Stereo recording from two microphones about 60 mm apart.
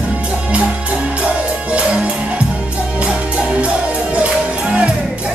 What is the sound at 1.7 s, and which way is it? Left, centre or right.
Music, centre.